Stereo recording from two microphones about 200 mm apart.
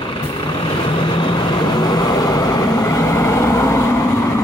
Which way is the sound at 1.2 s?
20° left (ahead or behind).